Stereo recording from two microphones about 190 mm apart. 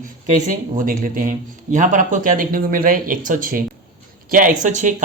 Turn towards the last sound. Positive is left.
turn(degrees=-40)  # may be behind; listen again after turning